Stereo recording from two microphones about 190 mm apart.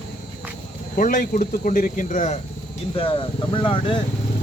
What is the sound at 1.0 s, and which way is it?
Speech, 45° left (ahead or behind).